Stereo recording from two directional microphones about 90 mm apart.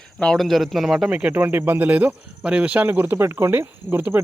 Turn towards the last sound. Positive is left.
turn(degrees=-25)  # may be behind; listen again after turning